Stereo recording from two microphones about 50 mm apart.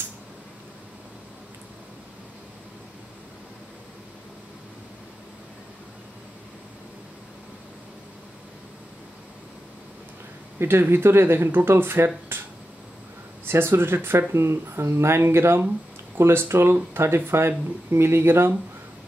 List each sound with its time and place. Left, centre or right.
10.6 s speech: right
12.3 s a sound: right
13.5 s speech: right
14.3 s speech: right